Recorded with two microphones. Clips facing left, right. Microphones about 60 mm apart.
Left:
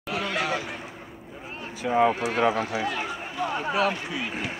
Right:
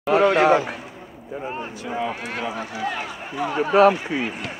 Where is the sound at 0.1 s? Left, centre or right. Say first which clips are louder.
Right 12 dB; right.